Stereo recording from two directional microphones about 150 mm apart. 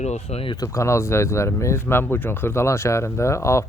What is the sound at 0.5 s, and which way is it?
Speech, 20° left (ahead or behind).